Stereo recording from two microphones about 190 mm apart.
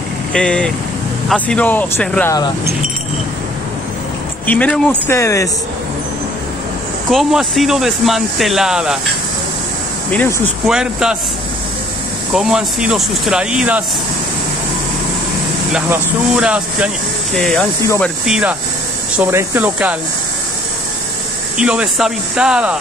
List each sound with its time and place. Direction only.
0.3 s speech: 5° left (ahead or behind)
4.5 s speech: 5° left (ahead or behind)
5.1 s speech: 15° left (ahead or behind)
7.1 s speech: centre (ahead or behind)
10.1 s speech: 10° left (ahead or behind)
10.7 s speech: 5° right (ahead or behind)
12.4 s speech: 5° right (ahead or behind)
15.7 s speech: 5° right (ahead or behind); by 18.1 s 10° left (ahead or behind)
18.2 s speech: 5° right (ahead or behind)
21.5 s speech: 5° right (ahead or behind)